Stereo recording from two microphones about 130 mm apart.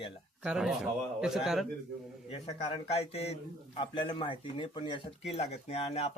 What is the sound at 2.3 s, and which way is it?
A man's voice, 45° left (ahead or behind).